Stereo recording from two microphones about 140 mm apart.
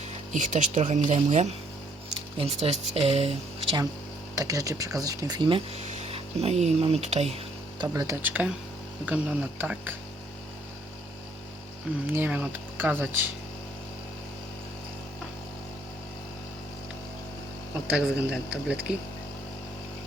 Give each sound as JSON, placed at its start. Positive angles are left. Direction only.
{"t": 0.3, "sound": "speech", "side_deg": -60}
{"t": 2.4, "sound": "speech", "side_deg": -45}
{"t": 4.4, "sound": "speech", "side_deg": -25}
{"t": 5.7, "sound": "speech", "side_deg": -50}
{"t": 7.8, "sound": "speech", "side_deg": -25}
{"t": 12.1, "sound": "speech", "side_deg": -10}
{"t": 17.8, "sound": "speech", "side_deg": -5}